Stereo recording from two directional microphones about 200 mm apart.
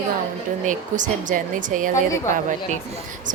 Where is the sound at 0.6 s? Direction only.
40° right (ahead or behind).